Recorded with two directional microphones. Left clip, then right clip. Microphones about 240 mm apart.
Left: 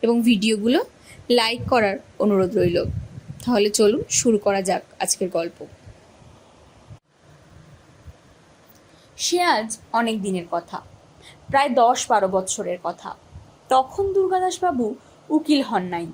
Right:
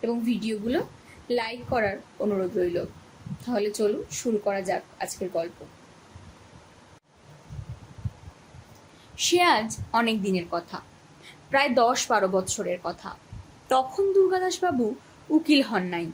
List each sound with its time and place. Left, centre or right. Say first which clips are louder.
0.0 s a woman's voice: left 9 dB; left
9.1 s speech: left 1 dB; centre